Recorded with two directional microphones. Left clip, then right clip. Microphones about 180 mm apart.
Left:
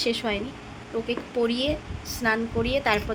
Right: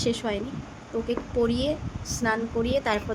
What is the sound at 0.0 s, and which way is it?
A woman's voice, 20° right (ahead or behind).